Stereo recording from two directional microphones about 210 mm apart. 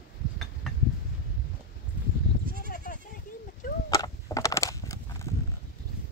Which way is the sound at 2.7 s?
45° left (ahead or behind).